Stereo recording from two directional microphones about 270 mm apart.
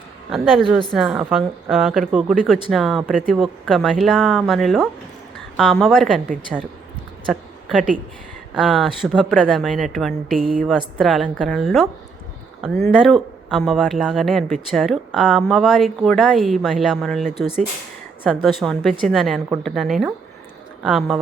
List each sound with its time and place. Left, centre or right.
0.3 s speech: centre
8.5 s speech: centre
10.3 s speech: right
10.7 s speech: centre
18.4 s speech: centre